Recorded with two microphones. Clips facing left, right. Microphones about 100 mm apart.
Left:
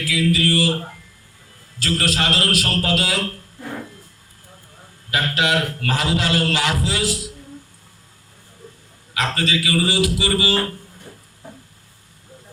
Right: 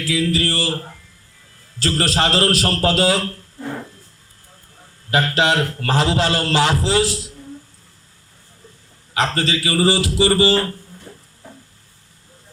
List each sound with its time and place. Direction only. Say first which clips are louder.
0.0 s speech: even; 30° right (ahead or behind)
1.8 s a man's voice: right 3 dB; 30° right (ahead or behind)
5.1 s a man's voice: right 3 dB; 30° right (ahead or behind)
9.1 s a man's voice: right 2 dB; 30° right (ahead or behind)